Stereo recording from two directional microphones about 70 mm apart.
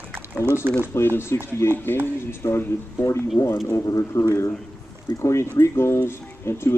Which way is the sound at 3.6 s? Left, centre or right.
Left.